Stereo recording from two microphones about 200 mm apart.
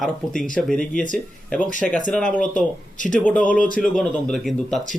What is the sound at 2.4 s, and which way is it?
Speech, 40° left (ahead or behind).